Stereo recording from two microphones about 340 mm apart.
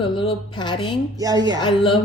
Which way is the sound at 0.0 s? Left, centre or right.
Centre.